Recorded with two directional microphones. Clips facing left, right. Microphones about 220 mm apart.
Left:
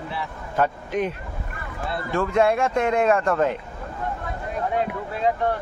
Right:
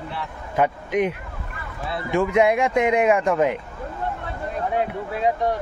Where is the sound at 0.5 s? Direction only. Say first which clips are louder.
Right 2 dB; 15° right (ahead or behind).